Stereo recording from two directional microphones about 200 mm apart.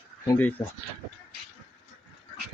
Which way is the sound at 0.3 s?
10° left (ahead or behind).